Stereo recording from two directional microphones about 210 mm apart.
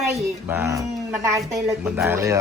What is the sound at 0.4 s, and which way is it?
A man's voice, 10° right (ahead or behind).